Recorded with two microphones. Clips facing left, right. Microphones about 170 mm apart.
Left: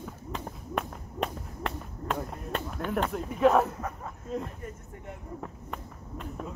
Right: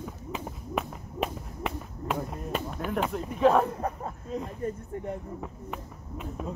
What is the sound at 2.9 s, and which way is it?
Speech, centre (ahead or behind).